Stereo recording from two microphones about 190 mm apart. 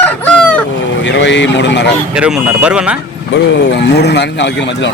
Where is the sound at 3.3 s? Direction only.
65° left (ahead or behind).